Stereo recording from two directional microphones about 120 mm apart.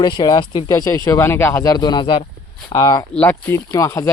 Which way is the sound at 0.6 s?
25° left (ahead or behind).